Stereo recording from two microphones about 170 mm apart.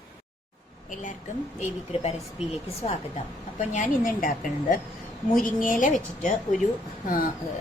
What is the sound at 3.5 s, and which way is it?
A woman's voice, 45° left (ahead or behind).